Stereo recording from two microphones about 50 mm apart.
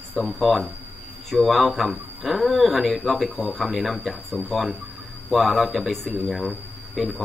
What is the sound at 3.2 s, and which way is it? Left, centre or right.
Speech, left.